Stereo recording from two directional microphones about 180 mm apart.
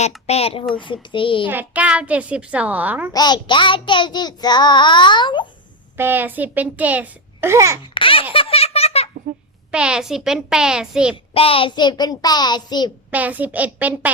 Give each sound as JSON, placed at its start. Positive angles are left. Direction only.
{"t": 0.3, "sound": "a child's voice", "side_deg": 35}
{"t": 0.8, "sound": "child singing", "side_deg": 25}
{"t": 1.5, "sound": "a child's voice", "side_deg": -10}
{"t": 3.1, "sound": "child singing", "side_deg": 25}
{"t": 6.0, "sound": "a child's voice", "side_deg": -10}
{"t": 7.9, "sound": "baby laughter", "side_deg": 30}
{"t": 9.7, "sound": "a child's voice", "side_deg": -5}
{"t": 11.3, "sound": "child singing", "side_deg": 30}
{"t": 13.1, "sound": "a child's voice", "side_deg": -10}